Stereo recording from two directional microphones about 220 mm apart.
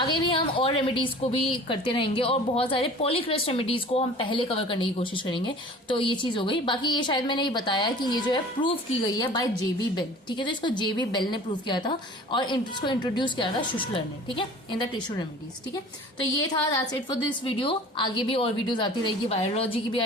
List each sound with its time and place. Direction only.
0.0 s a woman's voice: 20° left (ahead or behind)
16.7 s a woman's voice: 20° left (ahead or behind)